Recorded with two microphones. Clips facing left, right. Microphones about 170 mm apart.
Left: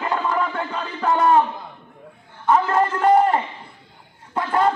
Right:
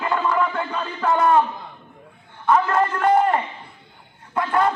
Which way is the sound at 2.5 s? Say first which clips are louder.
Even; 30° left (ahead or behind).